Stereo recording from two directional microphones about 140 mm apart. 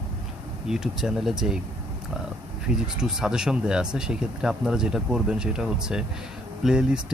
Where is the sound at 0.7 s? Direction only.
5° right (ahead or behind).